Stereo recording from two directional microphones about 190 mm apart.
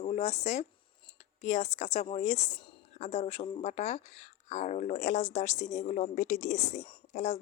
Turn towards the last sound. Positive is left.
turn(degrees=35)  # may be behind; listen again after turning